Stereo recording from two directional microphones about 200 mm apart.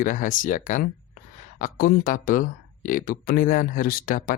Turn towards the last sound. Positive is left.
turn(degrees=45)  # may be behind; listen again after turning